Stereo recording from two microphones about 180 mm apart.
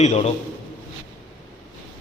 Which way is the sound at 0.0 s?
40° left (ahead or behind).